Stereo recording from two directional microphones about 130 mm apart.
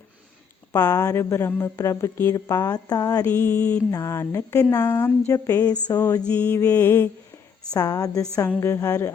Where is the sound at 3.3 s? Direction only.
10° left (ahead or behind).